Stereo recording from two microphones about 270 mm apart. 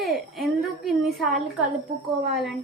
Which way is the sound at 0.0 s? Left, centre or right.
Centre.